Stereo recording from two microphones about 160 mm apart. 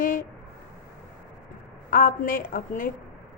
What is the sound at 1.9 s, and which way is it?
A woman's voice, 60° left (ahead or behind).